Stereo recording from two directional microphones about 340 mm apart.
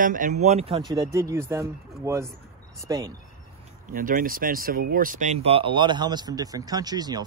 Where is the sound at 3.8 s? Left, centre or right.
Right.